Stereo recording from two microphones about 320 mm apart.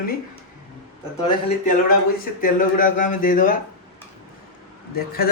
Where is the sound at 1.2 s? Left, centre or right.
Centre.